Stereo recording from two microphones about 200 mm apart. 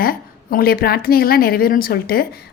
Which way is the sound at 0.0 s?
50° left (ahead or behind).